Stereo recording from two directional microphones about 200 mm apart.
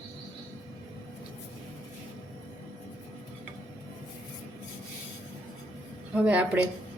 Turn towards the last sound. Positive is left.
turn(degrees=-5)  # may be behind; listen again after turning